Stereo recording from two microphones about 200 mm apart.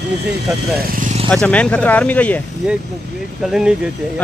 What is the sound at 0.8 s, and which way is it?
Vehicle, 40° right (ahead or behind).